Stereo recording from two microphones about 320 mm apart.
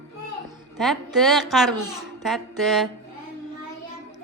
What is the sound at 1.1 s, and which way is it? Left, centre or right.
A woman's voice, centre.